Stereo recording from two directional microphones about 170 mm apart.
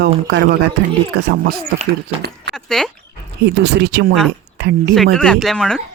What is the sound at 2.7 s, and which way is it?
Speech, 5° left (ahead or behind).